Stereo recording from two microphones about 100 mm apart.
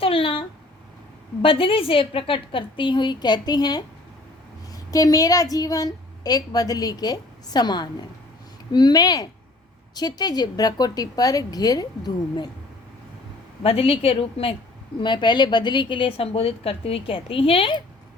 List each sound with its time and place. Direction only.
0.0 s a sound: 65° left (ahead or behind)
1.4 s a woman's voice: 65° left (ahead or behind); by 12.5 s 45° left (ahead or behind)
13.6 s a woman's voice: 70° left (ahead or behind)
15.0 s a woman's voice: 50° left (ahead or behind)